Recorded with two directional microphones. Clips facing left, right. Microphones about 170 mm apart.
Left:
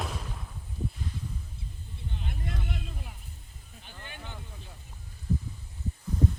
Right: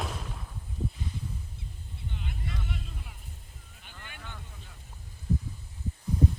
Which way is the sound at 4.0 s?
25° left (ahead or behind).